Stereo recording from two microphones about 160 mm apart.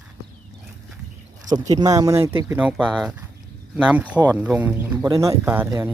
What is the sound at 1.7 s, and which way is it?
Speech, 25° right (ahead or behind).